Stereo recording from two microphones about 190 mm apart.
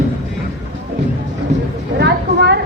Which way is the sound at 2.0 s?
60° right (ahead or behind).